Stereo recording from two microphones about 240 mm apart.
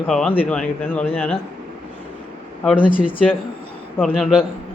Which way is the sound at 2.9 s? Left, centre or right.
Left.